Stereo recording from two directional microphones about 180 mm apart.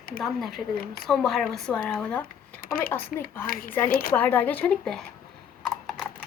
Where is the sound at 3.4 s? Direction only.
50° left (ahead or behind).